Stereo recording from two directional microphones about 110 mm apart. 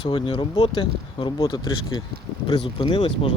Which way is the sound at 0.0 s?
55° left (ahead or behind).